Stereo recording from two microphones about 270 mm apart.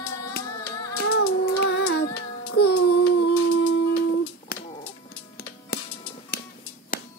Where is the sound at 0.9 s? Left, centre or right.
Left.